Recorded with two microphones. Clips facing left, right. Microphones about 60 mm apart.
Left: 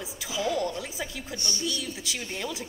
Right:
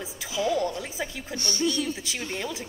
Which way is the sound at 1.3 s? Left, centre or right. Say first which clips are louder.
Right 6 dB; right.